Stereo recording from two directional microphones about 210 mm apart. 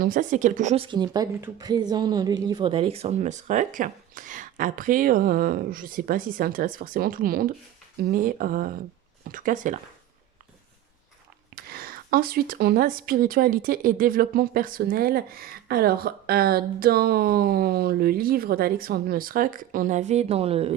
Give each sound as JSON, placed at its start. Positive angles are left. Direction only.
{"t": 0.0, "sound": "speech", "side_deg": -40}
{"t": 11.5, "sound": "speech", "side_deg": -45}